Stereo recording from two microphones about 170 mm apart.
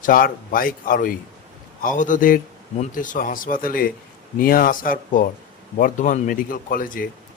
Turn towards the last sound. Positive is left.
turn(degrees=55)  # may be behind; listen again after turning